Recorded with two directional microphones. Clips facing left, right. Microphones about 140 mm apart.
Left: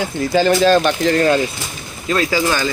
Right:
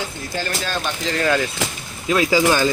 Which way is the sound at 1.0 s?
45° left (ahead or behind).